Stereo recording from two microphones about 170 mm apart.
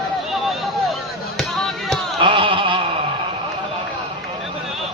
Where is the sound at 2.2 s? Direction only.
30° right (ahead or behind).